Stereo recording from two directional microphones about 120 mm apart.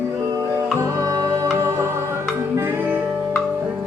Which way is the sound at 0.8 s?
25° right (ahead or behind).